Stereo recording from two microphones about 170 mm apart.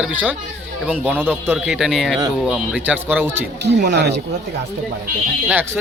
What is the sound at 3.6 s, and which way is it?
Speech, 80° right.